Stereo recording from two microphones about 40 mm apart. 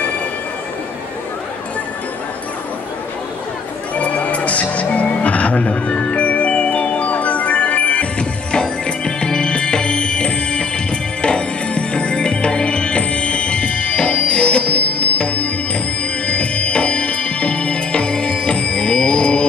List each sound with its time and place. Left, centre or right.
3.9 s music: left
8.2 s music: left